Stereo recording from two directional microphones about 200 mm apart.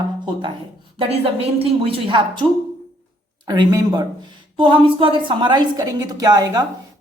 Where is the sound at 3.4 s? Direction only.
20° right (ahead or behind).